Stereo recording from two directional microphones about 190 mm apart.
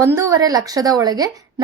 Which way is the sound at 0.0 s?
15° right (ahead or behind).